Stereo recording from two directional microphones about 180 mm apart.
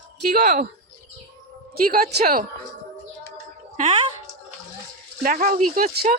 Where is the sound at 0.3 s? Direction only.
55° right (ahead or behind).